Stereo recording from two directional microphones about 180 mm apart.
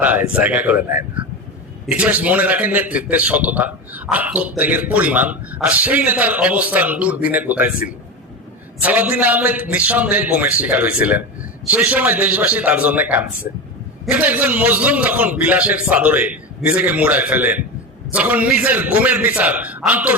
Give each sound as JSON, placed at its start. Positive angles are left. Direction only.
{"t": 0.0, "sound": "a man's voice", "side_deg": -10}
{"t": 1.9, "sound": "a man's voice", "side_deg": -10}
{"t": 8.8, "sound": "a man's voice", "side_deg": -10}